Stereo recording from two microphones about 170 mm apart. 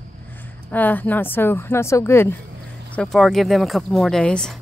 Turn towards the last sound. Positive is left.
turn(degrees=5)  # may be behind; listen again after turning